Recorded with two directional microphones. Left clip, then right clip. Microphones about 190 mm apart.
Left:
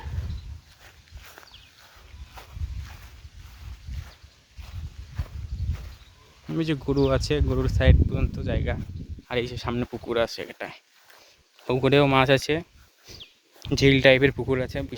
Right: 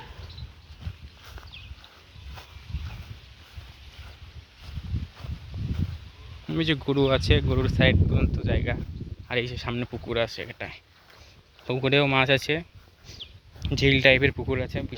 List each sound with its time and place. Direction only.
6.5 s speech: centre (ahead or behind)
9.3 s speech: 25° left (ahead or behind)
13.1 s a sound: 50° left (ahead or behind)
13.6 s speech: 50° left (ahead or behind)